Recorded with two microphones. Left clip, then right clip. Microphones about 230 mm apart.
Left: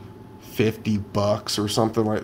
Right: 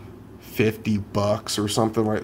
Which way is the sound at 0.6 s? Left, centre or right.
Centre.